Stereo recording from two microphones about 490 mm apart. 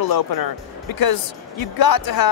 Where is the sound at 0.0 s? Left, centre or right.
Left.